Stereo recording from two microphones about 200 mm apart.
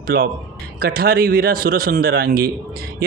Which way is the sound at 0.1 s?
50° right (ahead or behind).